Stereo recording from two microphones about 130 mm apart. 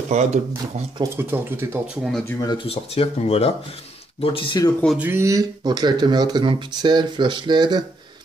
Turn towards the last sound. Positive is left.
turn(degrees=-35)  # may be behind; listen again after turning